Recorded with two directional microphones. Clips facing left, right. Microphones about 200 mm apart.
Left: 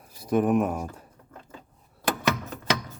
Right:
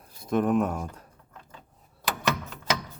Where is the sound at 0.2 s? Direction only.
5° left (ahead or behind).